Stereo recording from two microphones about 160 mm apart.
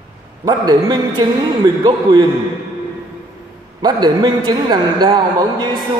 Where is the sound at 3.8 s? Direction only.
25° right (ahead or behind).